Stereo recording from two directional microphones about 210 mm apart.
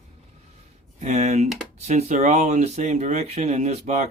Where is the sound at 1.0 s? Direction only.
35° right (ahead or behind).